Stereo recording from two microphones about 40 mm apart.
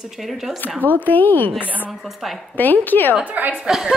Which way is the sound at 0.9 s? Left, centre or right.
Left.